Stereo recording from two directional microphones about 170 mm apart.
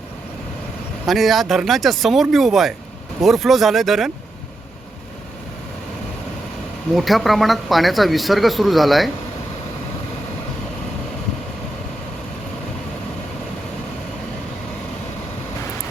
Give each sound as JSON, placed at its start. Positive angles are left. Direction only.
{"t": 1.0, "sound": "speech", "side_deg": 0}
{"t": 6.9, "sound": "speech", "side_deg": 0}